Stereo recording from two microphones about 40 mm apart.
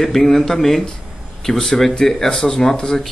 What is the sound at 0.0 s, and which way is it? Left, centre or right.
Speech, centre.